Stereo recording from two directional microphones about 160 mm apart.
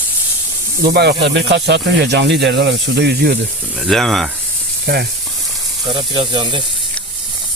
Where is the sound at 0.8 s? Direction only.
85° right.